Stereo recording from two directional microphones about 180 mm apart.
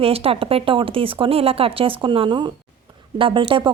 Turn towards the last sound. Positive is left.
turn(degrees=-30)  # may be behind; listen again after turning